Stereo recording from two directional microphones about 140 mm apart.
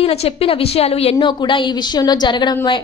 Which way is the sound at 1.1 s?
30° left (ahead or behind).